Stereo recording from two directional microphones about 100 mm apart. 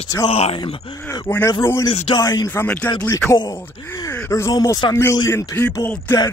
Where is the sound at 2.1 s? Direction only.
45° left (ahead or behind).